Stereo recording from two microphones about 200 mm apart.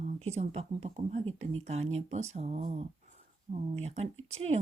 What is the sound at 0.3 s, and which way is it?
Speech, 30° right (ahead or behind).